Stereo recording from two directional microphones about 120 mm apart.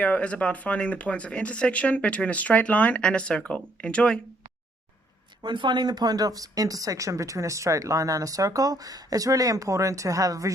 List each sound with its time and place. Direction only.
0.0 s speech: 10° left (ahead or behind)
5.4 s speech: 40° right (ahead or behind)